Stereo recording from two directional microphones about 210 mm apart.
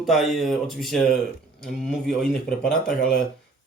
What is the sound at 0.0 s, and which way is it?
Speech, centre (ahead or behind).